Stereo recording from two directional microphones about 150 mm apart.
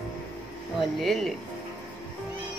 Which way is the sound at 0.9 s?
Centre (ahead or behind).